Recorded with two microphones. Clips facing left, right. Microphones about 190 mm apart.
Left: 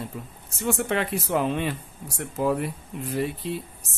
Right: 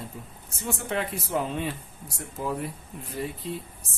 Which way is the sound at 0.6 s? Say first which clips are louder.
Left 5 dB; 70° left (ahead or behind).